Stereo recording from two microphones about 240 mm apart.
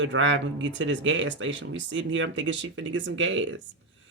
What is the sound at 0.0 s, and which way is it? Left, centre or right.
Speech, right.